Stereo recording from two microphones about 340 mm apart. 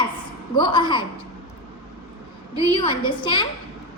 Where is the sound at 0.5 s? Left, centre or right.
Centre.